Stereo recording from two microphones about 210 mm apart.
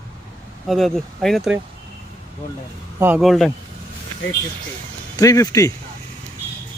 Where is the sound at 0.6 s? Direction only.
Centre (ahead or behind).